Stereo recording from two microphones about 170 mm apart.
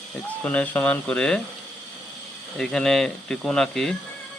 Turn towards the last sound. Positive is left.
turn(degrees=0)  # may be behind; listen again after turning